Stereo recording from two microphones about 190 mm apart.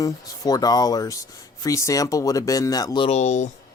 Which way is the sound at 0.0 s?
20° left (ahead or behind).